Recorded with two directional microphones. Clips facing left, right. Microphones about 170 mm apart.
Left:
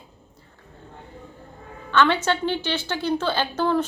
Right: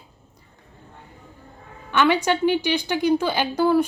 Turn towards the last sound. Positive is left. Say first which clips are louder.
# right 3 dB
turn(degrees=-10)  # may be behind; listen again after turning